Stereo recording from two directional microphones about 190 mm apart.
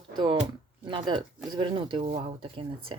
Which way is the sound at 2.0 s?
40° right (ahead or behind).